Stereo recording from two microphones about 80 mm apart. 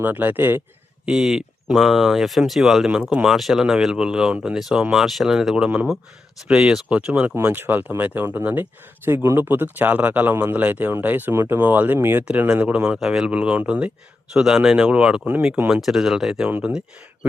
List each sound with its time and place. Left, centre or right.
0.0 s speech: right
1.0 s speech: centre
16.5 s speech: right